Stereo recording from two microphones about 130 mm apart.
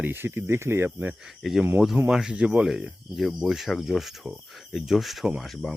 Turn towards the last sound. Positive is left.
turn(degrees=0)  # may be behind; listen again after turning